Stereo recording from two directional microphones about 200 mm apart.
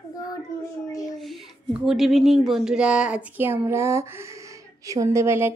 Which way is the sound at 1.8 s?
Centre (ahead or behind).